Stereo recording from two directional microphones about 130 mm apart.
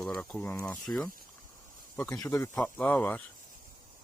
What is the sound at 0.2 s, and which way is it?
Speech, 10° left (ahead or behind).